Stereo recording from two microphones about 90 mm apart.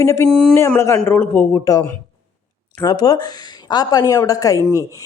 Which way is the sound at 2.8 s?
50° left (ahead or behind).